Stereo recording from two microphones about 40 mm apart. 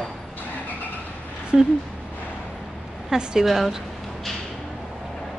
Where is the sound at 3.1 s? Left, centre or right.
Centre.